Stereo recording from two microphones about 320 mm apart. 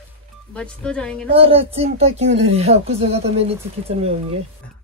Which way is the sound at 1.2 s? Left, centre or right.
Centre.